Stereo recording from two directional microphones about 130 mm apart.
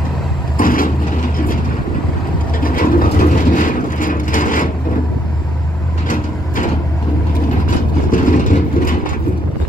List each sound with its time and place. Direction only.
0.6 s vehicle: 90° left
2.6 s vehicle: 90° left
6.0 s vehicle: 90° left
8.1 s vehicle: 90° left